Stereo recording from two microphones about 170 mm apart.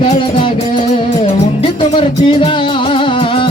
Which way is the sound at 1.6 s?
30° left (ahead or behind).